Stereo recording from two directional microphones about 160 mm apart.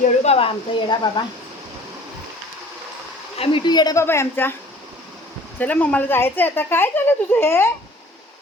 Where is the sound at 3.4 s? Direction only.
30° left (ahead or behind); by 4.5 s 15° left (ahead or behind).